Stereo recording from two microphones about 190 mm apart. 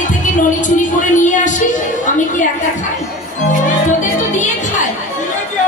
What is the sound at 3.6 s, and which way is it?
Music, 40° left (ahead or behind).